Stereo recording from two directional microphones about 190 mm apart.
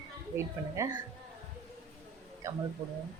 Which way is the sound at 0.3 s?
15° right (ahead or behind).